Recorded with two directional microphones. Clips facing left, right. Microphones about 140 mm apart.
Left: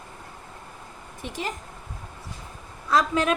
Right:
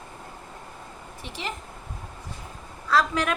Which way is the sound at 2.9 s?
20° left (ahead or behind).